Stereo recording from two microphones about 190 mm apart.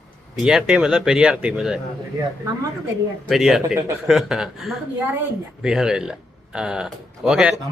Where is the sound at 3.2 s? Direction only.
Centre (ahead or behind).